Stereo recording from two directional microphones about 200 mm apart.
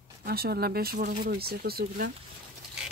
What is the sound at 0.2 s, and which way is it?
Speech, 50° right (ahead or behind).